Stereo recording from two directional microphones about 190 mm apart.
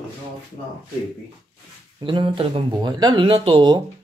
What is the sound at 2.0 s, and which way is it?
Speech, 25° right (ahead or behind).